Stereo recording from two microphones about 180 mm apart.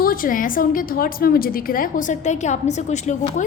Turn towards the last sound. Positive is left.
turn(degrees=40)  # may be behind; listen again after turning